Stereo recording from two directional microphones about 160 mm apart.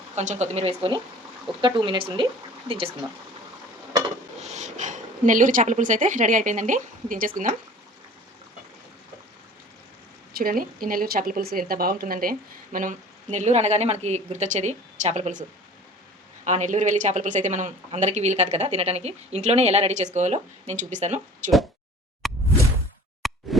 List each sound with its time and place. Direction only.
0.2 s speech: 45° right (ahead or behind)
4.4 s speech: 45° right (ahead or behind)
10.3 s speech: 65° right (ahead or behind); by 21.5 s 50° right (ahead or behind)
22.2 s plop: centre (ahead or behind)